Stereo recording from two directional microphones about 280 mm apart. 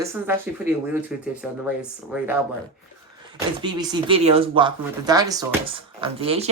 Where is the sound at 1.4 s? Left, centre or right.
Centre.